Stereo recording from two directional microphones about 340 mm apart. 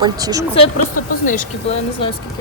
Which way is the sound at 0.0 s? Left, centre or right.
Centre.